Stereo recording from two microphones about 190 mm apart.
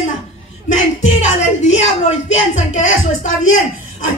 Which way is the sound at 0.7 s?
40° left (ahead or behind).